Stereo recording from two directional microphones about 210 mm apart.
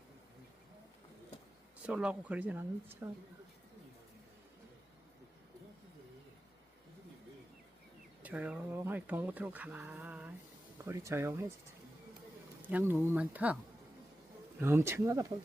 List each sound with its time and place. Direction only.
1.9 s speech: 5° right (ahead or behind)
8.2 s speech: 5° right (ahead or behind)
12.6 s speech: 10° right (ahead or behind)
14.6 s speech: 10° right (ahead or behind)